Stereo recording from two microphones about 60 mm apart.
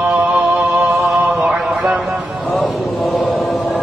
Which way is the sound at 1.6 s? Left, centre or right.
Centre.